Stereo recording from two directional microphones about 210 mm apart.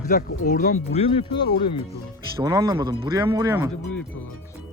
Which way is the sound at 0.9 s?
25° left (ahead or behind).